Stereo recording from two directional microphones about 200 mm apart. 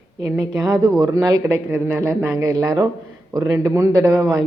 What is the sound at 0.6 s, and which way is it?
Speech, 20° right (ahead or behind).